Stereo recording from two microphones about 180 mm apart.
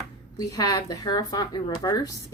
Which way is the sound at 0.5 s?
20° left (ahead or behind).